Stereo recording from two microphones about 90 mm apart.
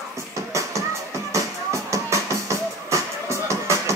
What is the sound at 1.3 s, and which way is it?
Music, 35° right (ahead or behind).